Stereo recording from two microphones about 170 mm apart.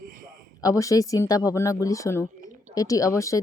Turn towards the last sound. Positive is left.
turn(degrees=20)  # may be behind; listen again after turning